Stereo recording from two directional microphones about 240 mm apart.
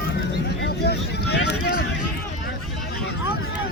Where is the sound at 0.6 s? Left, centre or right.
Left.